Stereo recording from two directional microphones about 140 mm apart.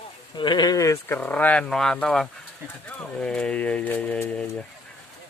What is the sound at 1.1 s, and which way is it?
Speech, 10° left (ahead or behind).